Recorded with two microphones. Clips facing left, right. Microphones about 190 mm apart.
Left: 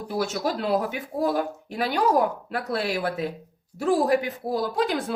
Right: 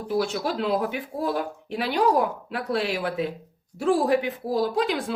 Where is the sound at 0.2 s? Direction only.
45° left (ahead or behind).